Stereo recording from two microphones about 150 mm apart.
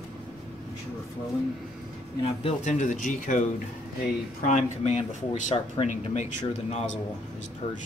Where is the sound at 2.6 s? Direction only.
55° left (ahead or behind).